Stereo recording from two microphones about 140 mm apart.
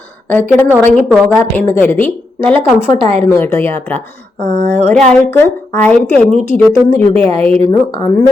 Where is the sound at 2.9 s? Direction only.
45° right (ahead or behind).